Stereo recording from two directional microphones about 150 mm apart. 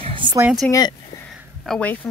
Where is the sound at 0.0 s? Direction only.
35° right (ahead or behind).